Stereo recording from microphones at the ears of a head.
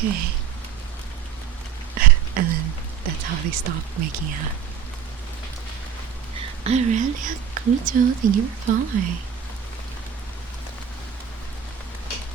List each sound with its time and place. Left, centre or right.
0.0 s speech: right
2.0 s a sound: right
6.3 s speech: right